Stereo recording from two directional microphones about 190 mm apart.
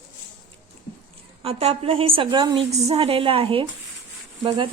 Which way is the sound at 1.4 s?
30° right (ahead or behind).